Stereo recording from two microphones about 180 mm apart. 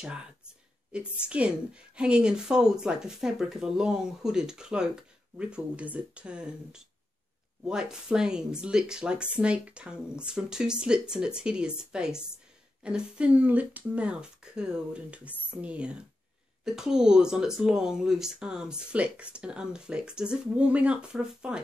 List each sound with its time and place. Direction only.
0.9 s speech: 5° right (ahead or behind)